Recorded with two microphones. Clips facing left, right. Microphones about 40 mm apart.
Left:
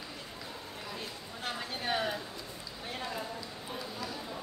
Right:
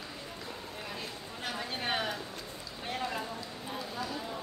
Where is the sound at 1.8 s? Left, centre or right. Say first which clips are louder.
Left 1 dB; right.